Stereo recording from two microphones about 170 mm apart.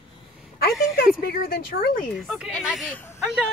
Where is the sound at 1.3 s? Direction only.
60° left (ahead or behind).